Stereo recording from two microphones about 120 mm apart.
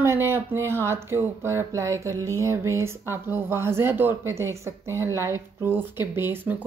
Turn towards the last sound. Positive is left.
turn(degrees=-20)  # may be behind; listen again after turning